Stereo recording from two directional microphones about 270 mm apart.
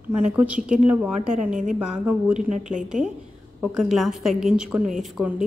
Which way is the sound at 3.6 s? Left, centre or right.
Centre.